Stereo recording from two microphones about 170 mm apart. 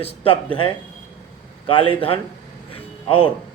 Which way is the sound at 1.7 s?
30° left (ahead or behind).